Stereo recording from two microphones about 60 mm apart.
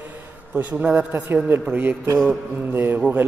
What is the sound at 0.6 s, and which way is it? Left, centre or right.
A man's voice, right.